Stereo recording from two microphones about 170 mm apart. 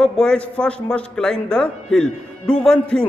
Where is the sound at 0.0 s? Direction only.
5° left (ahead or behind).